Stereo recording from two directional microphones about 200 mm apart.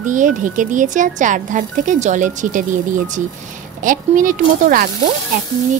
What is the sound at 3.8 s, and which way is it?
A woman's voice, 40° right (ahead or behind).